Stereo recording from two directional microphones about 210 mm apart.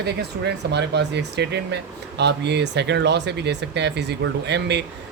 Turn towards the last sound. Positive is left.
turn(degrees=-55)  # may be behind; listen again after turning